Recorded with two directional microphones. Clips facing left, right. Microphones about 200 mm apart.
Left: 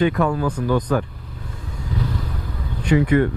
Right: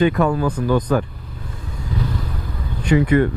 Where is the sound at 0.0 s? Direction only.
15° right (ahead or behind).